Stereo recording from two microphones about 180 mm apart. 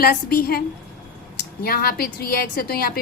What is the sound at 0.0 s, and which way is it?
Speech, 55° left (ahead or behind).